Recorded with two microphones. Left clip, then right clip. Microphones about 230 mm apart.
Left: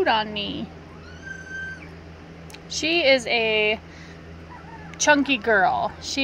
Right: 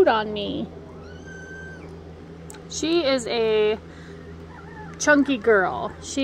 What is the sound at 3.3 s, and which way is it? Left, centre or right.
Speech, centre.